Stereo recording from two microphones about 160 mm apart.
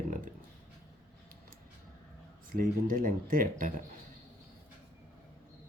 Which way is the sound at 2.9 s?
65° right (ahead or behind).